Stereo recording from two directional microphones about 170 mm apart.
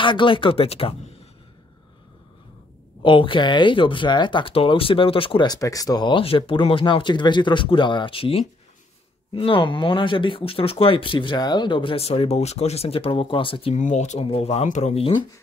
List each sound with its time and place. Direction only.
0.0 s speech: 30° left (ahead or behind)
3.0 s speech: 30° left (ahead or behind)
13.7 s speech: 45° left (ahead or behind)